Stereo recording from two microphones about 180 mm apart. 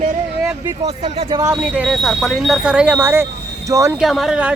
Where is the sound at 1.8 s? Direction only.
Centre (ahead or behind).